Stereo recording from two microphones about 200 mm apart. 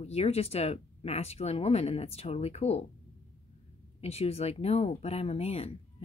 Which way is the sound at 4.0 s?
30° left (ahead or behind).